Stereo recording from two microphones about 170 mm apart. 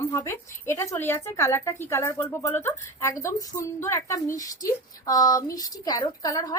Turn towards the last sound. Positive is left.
turn(degrees=20)  # may be behind; listen again after turning